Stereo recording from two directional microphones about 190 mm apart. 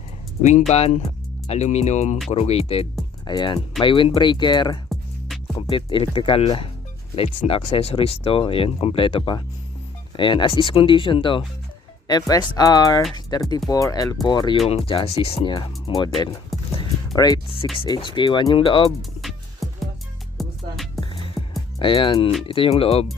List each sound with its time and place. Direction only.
0.7 s speech: 35° left (ahead or behind)
16.5 s music: centre (ahead or behind)
17.2 s music: 20° left (ahead or behind)
17.7 s speech: 25° left (ahead or behind)
19.2 s music: centre (ahead or behind)
21.8 s speech: 25° left (ahead or behind)